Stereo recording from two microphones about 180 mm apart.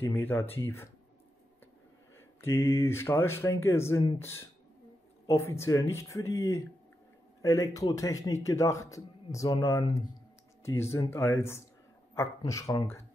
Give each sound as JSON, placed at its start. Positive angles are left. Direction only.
{"t": 0.0, "sound": "a man's voice", "side_deg": 10}
{"t": 2.4, "sound": "a man's voice", "side_deg": 15}